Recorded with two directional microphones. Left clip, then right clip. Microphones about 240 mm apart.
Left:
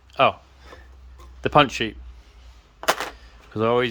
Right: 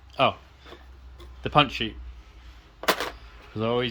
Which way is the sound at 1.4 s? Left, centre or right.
Centre.